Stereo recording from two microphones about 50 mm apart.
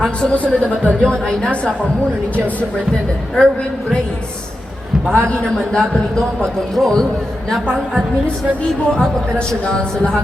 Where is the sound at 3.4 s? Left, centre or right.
Left.